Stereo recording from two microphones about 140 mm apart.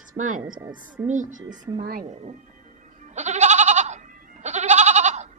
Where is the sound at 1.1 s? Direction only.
65° right (ahead or behind).